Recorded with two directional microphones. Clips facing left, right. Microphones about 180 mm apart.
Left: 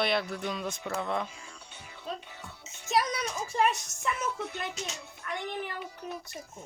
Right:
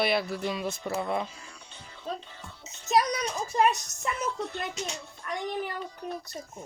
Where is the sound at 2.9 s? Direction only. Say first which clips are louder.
Right 3 dB; 40° right (ahead or behind).